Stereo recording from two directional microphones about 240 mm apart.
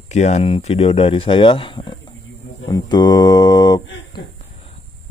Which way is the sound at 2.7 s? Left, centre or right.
Centre.